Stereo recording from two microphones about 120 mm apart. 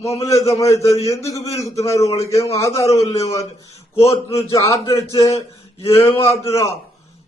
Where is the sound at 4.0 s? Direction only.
25° left (ahead or behind).